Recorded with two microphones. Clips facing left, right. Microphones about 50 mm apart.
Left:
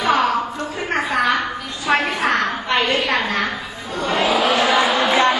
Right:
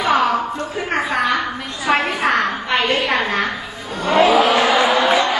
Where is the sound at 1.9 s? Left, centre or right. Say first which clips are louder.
Right 1 dB; centre.